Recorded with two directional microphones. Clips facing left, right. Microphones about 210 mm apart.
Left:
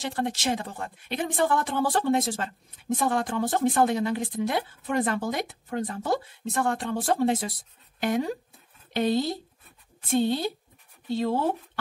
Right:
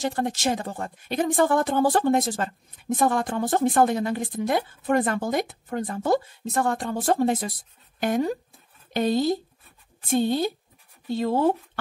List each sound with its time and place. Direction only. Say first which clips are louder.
0.0 s speech: right 3 dB; 45° right (ahead or behind)